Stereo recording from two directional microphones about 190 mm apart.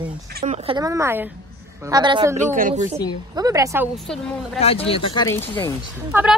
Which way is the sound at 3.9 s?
Centre (ahead or behind).